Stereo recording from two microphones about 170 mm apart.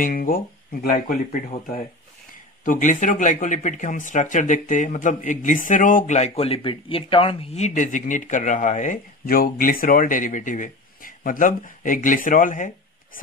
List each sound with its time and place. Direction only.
0.0 s speech: 55° left (ahead or behind)
2.6 s speech: 50° left (ahead or behind)